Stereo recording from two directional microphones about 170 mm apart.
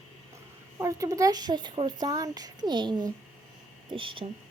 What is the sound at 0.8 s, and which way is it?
Speech, 20° right (ahead or behind).